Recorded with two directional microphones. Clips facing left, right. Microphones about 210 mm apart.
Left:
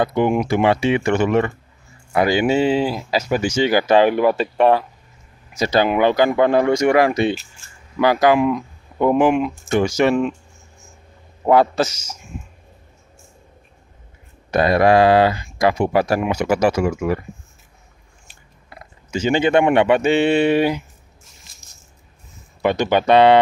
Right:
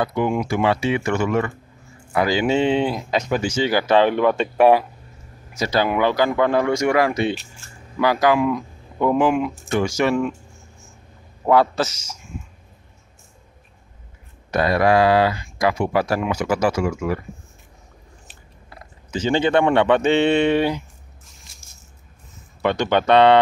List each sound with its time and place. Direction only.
0.0 s speech: 25° left (ahead or behind)
2.4 s speech: 5° left (ahead or behind)
4.6 s speech: 10° right (ahead or behind)
5.6 s speech: 20° left (ahead or behind)
11.4 s speech: 20° left (ahead or behind)
14.5 s speech: 20° left (ahead or behind)
19.0 s speech: 10° left (ahead or behind)
22.6 s speech: 10° left (ahead or behind)